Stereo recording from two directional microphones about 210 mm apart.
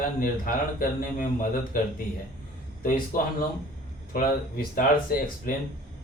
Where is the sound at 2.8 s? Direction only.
40° left (ahead or behind).